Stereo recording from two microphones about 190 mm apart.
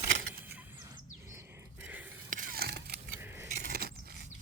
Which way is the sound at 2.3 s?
45° right (ahead or behind).